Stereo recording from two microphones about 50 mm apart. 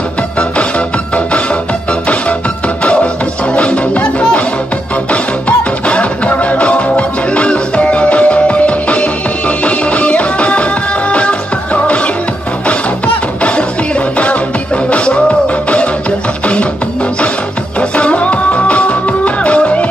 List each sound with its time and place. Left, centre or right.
0.4 s music: left
2.8 s music: left
17.7 s music: left